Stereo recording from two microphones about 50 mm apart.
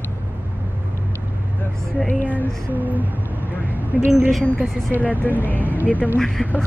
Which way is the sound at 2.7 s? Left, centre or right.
Right.